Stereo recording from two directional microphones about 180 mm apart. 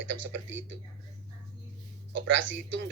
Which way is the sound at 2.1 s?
90° right.